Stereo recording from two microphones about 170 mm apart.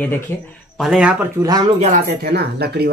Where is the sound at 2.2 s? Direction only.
70° right (ahead or behind).